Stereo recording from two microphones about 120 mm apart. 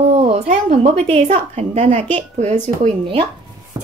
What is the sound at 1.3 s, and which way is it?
A woman's voice, 75° right (ahead or behind).